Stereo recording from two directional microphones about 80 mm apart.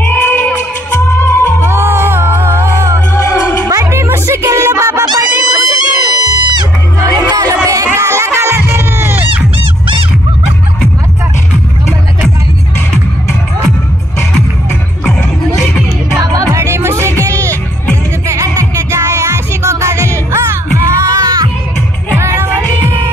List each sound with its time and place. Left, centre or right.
0.0 s music: left
1.6 s music: right
3.1 s music: left
3.6 s music: right
5.0 s music: right
5.3 s music: right
16.2 s music: right